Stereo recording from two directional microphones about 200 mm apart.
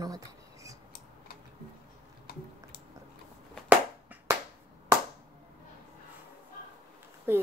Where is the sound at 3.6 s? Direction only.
10° right (ahead or behind).